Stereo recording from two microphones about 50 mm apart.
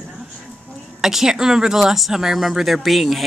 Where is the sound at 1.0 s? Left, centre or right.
Centre.